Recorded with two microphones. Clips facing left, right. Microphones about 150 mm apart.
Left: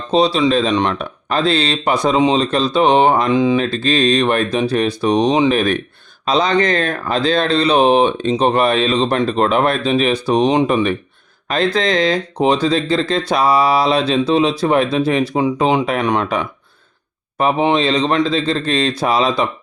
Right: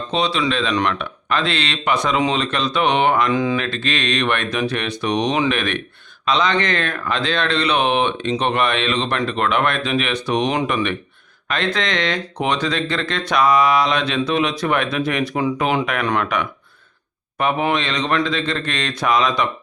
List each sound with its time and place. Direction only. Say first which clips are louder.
0.1 s speech: left 7 dB; 35° left (ahead or behind)
0.7 s speech: left 3 dB; 25° left (ahead or behind)
0.9 s speech: left 3 dB; 35° left (ahead or behind)
3.3 s speech: left 5 dB; 20° left (ahead or behind)
3.8 s speech: left 7 dB; 35° left (ahead or behind)